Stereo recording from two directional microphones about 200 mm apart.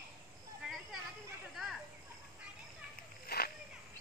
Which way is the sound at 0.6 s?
5° right (ahead or behind).